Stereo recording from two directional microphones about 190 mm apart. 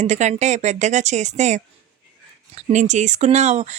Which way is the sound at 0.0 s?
35° right (ahead or behind).